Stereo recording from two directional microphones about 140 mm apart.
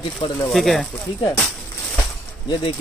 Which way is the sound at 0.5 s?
Centre (ahead or behind).